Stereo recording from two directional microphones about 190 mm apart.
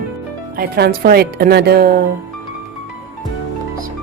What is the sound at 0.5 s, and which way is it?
Speech, 55° right (ahead or behind).